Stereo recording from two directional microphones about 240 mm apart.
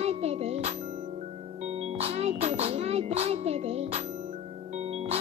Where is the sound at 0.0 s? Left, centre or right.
Right.